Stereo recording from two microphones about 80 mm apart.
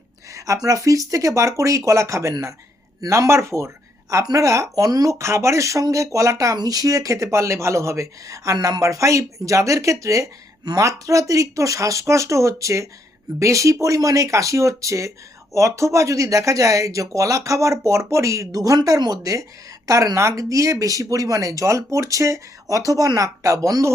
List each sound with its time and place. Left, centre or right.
0.3 s speech: right
8.5 s speech: right